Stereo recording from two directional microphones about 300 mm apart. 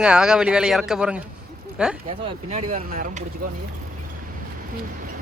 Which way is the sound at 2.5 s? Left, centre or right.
Right.